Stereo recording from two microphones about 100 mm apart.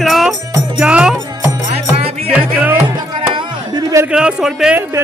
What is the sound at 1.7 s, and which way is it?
Music, 90° right.